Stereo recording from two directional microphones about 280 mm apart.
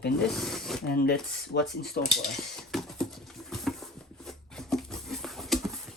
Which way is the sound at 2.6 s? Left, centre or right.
Centre.